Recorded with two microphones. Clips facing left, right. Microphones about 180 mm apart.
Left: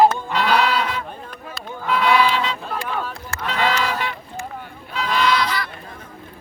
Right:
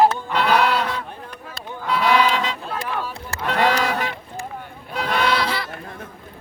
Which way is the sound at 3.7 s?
40° right (ahead or behind).